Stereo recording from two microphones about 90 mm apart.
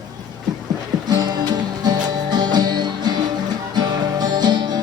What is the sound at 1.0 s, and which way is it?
Music, 50° right (ahead or behind).